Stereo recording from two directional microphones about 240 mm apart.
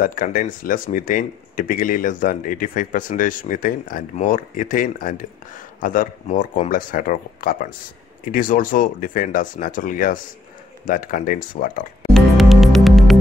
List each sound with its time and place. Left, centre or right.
0.0 s speech: left
12.1 s music: centre